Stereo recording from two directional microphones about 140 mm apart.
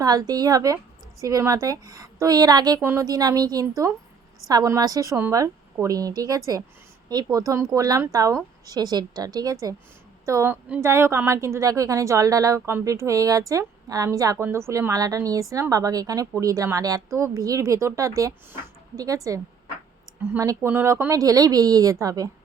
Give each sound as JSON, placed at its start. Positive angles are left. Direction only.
{"t": 0.0, "sound": "a woman's voice", "side_deg": -25}